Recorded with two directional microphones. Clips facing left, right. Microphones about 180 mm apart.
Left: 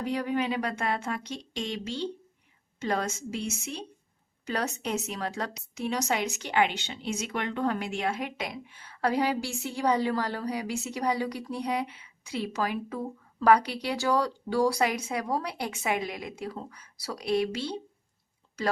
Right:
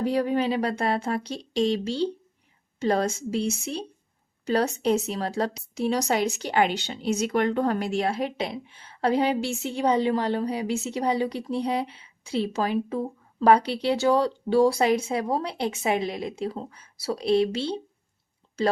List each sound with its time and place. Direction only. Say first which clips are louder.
0.0 s a woman's voice: right 5 dB; 30° right (ahead or behind)